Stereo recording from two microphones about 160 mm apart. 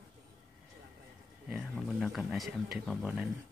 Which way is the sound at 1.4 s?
5° right (ahead or behind).